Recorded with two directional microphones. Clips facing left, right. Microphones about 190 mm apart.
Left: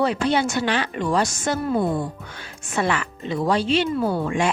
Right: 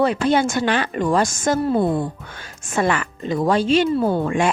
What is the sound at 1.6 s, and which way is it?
Speech, 30° right (ahead or behind).